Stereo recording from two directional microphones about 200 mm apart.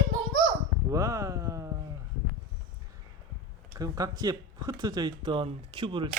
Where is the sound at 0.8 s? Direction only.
15° right (ahead or behind).